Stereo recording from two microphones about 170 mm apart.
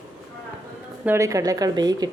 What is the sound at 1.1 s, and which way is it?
Speech, 20° right (ahead or behind).